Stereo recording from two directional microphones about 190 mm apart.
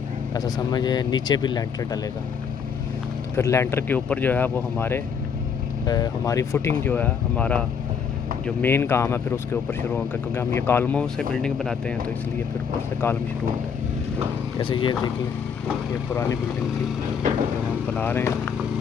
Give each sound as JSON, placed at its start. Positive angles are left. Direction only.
{"t": 0.3, "sound": "speech", "side_deg": 20}
{"t": 3.3, "sound": "speech", "side_deg": 15}
{"t": 14.6, "sound": "speech", "side_deg": 25}
{"t": 17.9, "sound": "speech", "side_deg": 10}